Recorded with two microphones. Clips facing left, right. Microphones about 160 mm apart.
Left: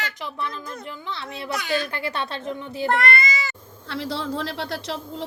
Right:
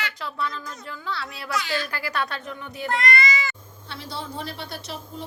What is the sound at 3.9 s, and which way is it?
A man's voice, 90° left.